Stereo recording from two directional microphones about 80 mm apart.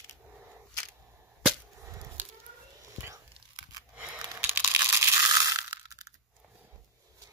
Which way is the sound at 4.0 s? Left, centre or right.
Right.